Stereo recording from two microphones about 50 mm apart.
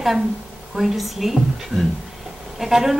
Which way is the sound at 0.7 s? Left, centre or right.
Centre.